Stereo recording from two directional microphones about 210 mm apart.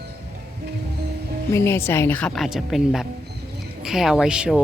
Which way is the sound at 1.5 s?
10° left (ahead or behind).